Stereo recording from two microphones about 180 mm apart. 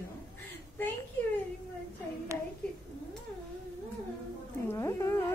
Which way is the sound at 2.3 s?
15° right (ahead or behind).